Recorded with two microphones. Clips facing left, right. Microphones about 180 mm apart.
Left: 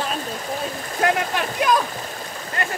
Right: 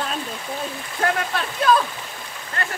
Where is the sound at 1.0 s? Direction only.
15° left (ahead or behind).